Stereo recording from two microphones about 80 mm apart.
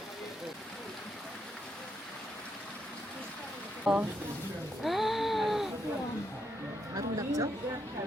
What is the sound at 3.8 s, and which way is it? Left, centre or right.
Speech, centre.